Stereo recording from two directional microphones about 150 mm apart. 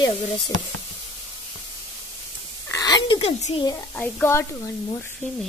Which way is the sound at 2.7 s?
25° left (ahead or behind).